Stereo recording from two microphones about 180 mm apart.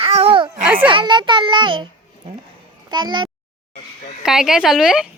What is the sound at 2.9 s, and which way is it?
Speech, 25° right (ahead or behind).